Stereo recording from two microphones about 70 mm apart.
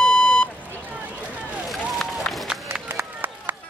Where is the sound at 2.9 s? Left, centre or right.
Right.